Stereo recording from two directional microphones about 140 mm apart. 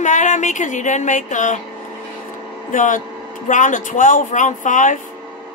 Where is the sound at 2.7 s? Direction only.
70° left (ahead or behind).